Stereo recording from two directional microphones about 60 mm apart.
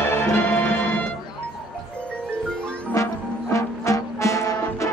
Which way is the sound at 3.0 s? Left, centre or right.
Left.